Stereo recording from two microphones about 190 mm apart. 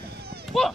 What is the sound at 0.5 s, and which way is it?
Children playing, centre (ahead or behind).